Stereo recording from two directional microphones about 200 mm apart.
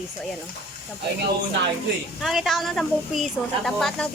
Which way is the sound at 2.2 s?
Centre (ahead or behind).